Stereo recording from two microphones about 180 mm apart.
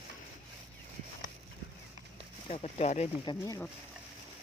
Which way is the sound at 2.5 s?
35° left (ahead or behind).